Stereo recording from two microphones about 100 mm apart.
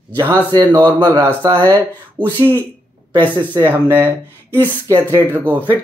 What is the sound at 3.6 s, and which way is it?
Speech, 20° right (ahead or behind).